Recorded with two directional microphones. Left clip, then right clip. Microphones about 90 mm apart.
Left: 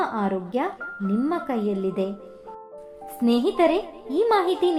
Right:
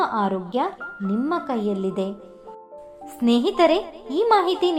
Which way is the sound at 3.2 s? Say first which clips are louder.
Right 2 dB; 25° right (ahead or behind).